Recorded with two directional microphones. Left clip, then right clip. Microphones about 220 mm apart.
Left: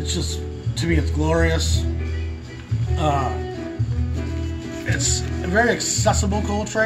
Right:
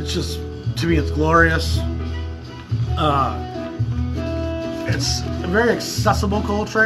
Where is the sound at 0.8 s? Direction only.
Centre (ahead or behind).